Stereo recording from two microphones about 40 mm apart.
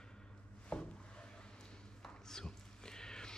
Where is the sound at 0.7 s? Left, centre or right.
Left.